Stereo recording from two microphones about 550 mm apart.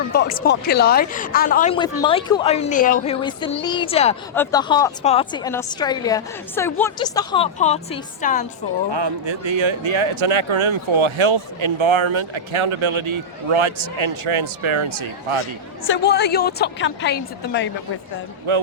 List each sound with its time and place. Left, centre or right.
0.1 s speech: centre
8.9 s speech: right
15.9 s speech: centre
18.5 s speech: right